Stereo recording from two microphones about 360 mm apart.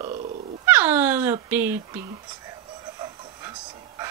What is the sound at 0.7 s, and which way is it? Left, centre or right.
Dog, centre.